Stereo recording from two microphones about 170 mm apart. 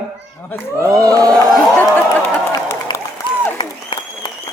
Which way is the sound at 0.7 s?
20° right (ahead or behind).